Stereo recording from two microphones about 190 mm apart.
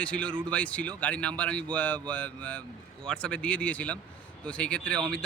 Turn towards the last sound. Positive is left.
turn(degrees=5)  # may be behind; listen again after turning